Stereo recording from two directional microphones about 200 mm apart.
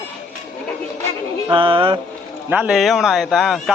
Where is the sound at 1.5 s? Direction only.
25° right (ahead or behind).